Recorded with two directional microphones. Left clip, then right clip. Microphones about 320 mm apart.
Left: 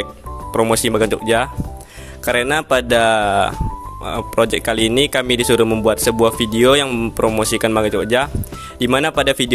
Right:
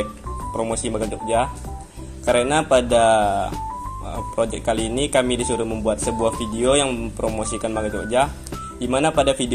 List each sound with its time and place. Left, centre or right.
0.5 s speech: left